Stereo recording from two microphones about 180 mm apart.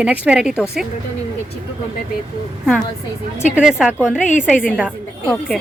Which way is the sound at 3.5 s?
5° right (ahead or behind).